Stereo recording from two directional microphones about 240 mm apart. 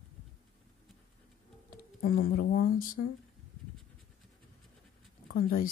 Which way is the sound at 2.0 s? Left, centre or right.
Left.